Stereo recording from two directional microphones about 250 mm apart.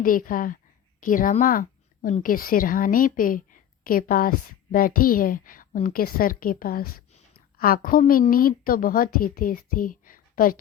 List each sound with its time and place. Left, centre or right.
0.0 s a woman's voice: left